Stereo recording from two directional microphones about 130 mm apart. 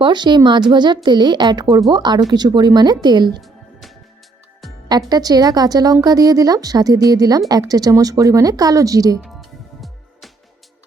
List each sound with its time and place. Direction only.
0.0 s speech: 35° right (ahead or behind)
3.4 s music: centre (ahead or behind)
4.9 s a woman's voice: 30° right (ahead or behind)
9.2 s music: centre (ahead or behind)